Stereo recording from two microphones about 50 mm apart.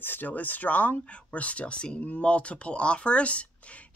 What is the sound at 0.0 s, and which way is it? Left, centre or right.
Speech, left.